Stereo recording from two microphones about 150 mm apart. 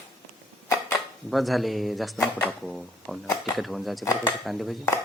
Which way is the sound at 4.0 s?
20° left (ahead or behind).